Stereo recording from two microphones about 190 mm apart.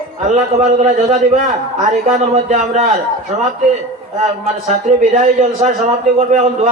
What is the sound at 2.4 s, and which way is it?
Speech, 40° right (ahead or behind).